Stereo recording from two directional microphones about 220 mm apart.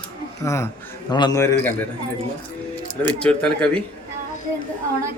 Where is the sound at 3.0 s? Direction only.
5° left (ahead or behind).